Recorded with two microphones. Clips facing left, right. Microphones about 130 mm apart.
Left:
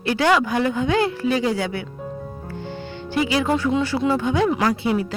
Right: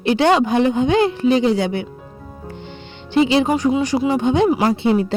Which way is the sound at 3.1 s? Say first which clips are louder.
Right 5 dB; 25° right (ahead or behind).